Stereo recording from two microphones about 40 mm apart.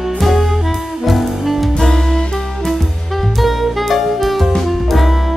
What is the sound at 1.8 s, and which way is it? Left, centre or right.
Music, centre.